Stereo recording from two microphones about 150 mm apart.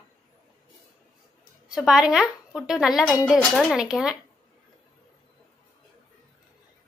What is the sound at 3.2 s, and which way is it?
Speech, 5° left (ahead or behind).